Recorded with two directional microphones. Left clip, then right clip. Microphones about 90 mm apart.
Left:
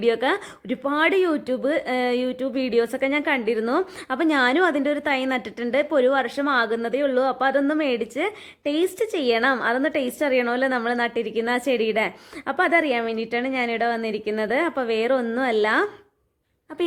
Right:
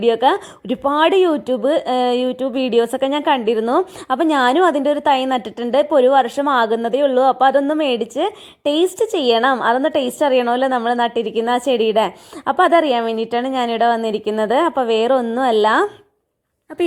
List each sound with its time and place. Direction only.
0.0 s speech: 25° right (ahead or behind)